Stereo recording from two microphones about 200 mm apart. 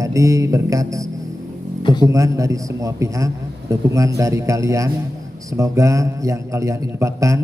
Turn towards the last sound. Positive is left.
turn(degrees=-15)  # may be behind; listen again after turning